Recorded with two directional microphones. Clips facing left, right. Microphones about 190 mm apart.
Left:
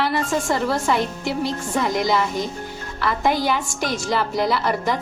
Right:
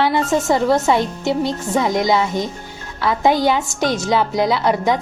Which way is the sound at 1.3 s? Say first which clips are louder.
Right 5 dB; centre (ahead or behind).